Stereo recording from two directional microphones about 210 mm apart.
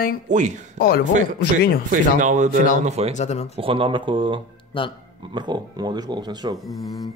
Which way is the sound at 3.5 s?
25° right (ahead or behind).